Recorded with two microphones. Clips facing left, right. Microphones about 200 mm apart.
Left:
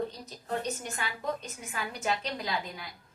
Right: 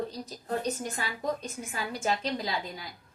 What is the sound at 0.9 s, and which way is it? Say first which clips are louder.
A woman's voice: right 2 dB; 35° right (ahead or behind).